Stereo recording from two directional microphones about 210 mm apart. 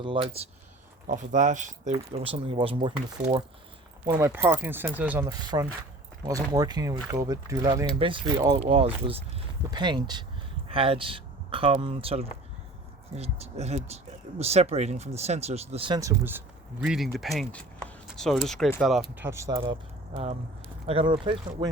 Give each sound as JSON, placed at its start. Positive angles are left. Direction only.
{"t": 0.0, "sound": "speech", "side_deg": -25}
{"t": 1.0, "sound": "speech", "side_deg": -40}
{"t": 16.0, "sound": "speech", "side_deg": -10}
{"t": 16.8, "sound": "speech", "side_deg": 0}
{"t": 20.8, "sound": "speech", "side_deg": -25}